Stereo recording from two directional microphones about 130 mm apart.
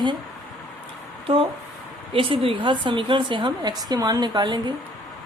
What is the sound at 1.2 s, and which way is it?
Speech, 45° right (ahead or behind).